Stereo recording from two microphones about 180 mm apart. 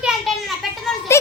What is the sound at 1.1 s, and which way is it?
Speech, 15° left (ahead or behind).